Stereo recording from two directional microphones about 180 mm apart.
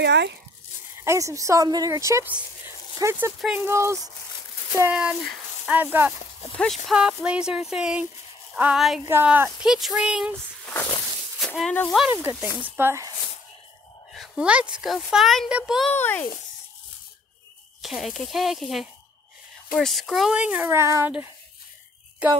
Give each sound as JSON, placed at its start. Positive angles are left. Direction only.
{"t": 0.0, "sound": "speech", "side_deg": -70}
{"t": 1.0, "sound": "speech", "side_deg": -15}
{"t": 3.3, "sound": "a woman's voice", "side_deg": -5}
{"t": 3.6, "sound": "speech", "side_deg": -15}
{"t": 4.9, "sound": "speech", "side_deg": -5}
{"t": 6.5, "sound": "a woman's voice", "side_deg": 5}
{"t": 11.3, "sound": "speech", "side_deg": 0}
{"t": 12.0, "sound": "speech", "side_deg": -10}
{"t": 14.1, "sound": "a woman's voice", "side_deg": 0}
{"t": 15.9, "sound": "a child's voice", "side_deg": 10}
{"t": 17.8, "sound": "a woman's voice", "side_deg": 0}